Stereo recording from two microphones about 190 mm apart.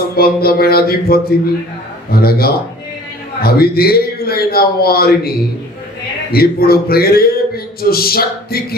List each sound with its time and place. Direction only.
0.0 s a man's voice: 55° left (ahead or behind)